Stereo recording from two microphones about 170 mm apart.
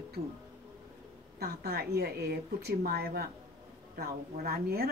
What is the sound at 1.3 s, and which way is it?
A woman's voice, 65° right (ahead or behind).